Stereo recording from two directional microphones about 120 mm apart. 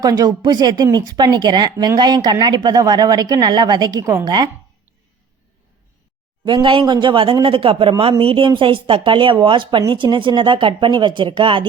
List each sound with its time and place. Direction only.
0.0 s speech: 30° right (ahead or behind)
4.0 s a woman's voice: 25° right (ahead or behind)
6.4 s speech: 40° right (ahead or behind)